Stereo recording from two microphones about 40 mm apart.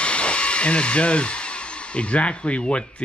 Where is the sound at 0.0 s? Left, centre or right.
Left.